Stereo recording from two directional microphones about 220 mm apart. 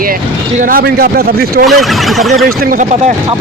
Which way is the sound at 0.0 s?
40° right (ahead or behind).